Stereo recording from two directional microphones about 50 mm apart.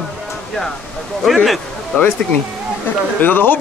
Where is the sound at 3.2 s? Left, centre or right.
Left.